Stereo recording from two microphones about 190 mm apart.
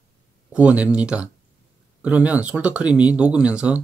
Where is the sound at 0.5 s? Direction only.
5° right (ahead or behind).